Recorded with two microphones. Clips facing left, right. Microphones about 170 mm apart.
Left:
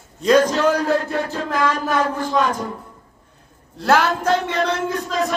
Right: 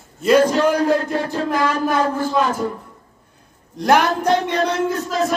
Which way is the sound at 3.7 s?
15° right (ahead or behind).